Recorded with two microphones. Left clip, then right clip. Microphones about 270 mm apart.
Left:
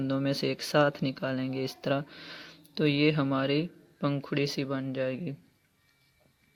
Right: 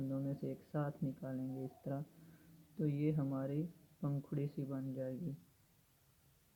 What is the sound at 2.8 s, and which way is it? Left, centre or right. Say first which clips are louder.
Speech: left 14 dB; left.